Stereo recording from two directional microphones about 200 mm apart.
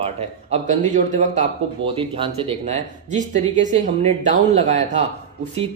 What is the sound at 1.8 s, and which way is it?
Speech, 25° right (ahead or behind).